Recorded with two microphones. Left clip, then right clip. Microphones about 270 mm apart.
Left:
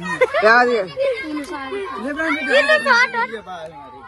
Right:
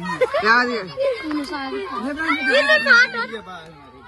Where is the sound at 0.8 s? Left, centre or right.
Right.